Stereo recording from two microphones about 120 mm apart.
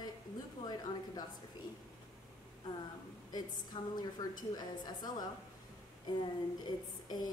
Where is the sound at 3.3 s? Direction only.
35° left (ahead or behind).